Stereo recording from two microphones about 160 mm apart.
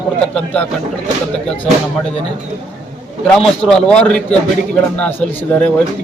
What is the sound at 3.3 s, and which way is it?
A man's voice, centre (ahead or behind).